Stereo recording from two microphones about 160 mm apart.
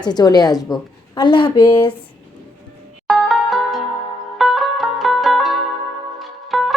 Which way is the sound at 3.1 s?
Centre (ahead or behind).